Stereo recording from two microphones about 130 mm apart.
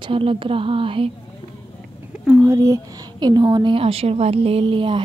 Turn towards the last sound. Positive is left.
turn(degrees=-40)  # may be behind; listen again after turning